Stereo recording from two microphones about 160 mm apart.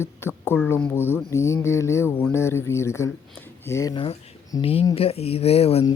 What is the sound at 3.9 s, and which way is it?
Speech, 35° left (ahead or behind).